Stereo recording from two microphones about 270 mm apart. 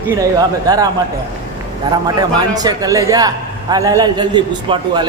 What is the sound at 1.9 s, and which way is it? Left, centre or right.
A man's voice, centre.